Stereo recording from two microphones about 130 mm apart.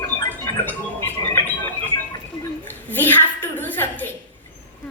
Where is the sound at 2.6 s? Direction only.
15° left (ahead or behind).